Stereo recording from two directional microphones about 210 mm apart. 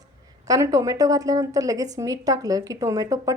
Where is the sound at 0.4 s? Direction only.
15° right (ahead or behind).